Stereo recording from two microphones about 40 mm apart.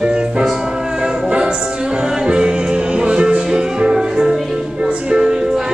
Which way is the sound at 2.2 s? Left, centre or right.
Right.